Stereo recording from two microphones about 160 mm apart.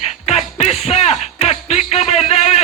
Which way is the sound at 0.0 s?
40° left (ahead or behind).